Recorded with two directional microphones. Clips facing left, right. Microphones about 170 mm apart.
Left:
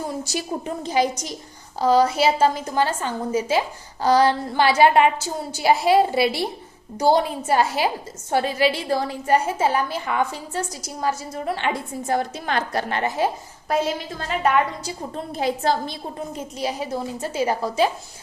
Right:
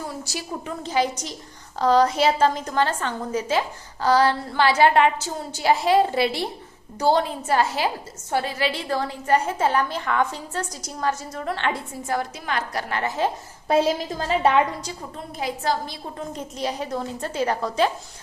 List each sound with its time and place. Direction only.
0.1 s a woman's voice: 20° left (ahead or behind)
12.0 s a woman's voice: 25° left (ahead or behind)
13.7 s a woman's voice: 35° right (ahead or behind)
15.1 s a woman's voice: 30° left (ahead or behind)
16.1 s a woman's voice: 5° left (ahead or behind)